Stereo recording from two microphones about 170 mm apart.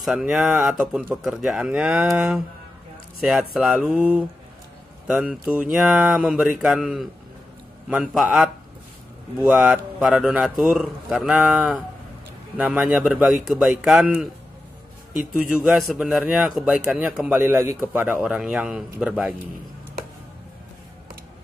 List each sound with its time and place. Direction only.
0.0 s a man's voice: 5° right (ahead or behind)